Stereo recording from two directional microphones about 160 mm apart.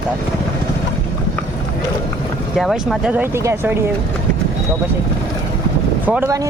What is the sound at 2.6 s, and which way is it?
Speech, centre (ahead or behind).